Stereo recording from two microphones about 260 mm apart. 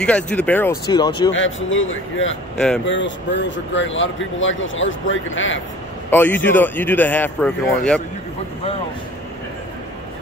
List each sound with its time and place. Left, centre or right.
0.0 s speech: centre
1.3 s speech: left
2.5 s speech: centre
2.8 s speech: left
6.0 s a man's voice: centre